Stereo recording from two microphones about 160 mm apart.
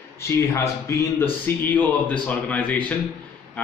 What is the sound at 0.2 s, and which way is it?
Speech, 15° left (ahead or behind).